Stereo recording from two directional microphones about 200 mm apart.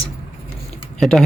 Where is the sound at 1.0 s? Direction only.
Centre (ahead or behind).